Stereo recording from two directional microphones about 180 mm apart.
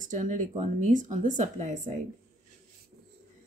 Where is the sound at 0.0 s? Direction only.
45° right (ahead or behind).